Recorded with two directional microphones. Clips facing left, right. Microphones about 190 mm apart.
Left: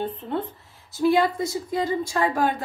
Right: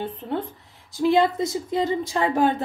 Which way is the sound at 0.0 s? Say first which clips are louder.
Even; 10° right (ahead or behind).